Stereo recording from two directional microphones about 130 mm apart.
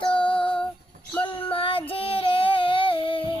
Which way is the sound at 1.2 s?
40° left (ahead or behind).